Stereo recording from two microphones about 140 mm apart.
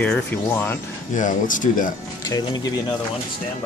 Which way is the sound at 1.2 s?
70° left (ahead or behind).